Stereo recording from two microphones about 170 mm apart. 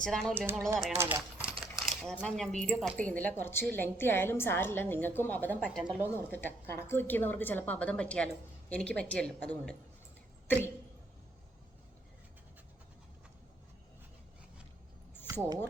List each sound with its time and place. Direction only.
0.0 s speech: 5° left (ahead or behind)
0.9 s speech: 15° right (ahead or behind)
1.6 s coin: centre (ahead or behind)
2.2 s a woman's voice: 5° left (ahead or behind)
5.6 s speech: 5° right (ahead or behind)
6.1 s a woman's voice: 10° left (ahead or behind)
15.3 s speech: 20° right (ahead or behind)